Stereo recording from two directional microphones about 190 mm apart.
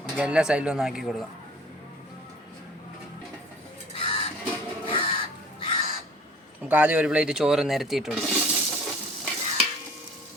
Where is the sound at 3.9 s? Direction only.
30° left (ahead or behind).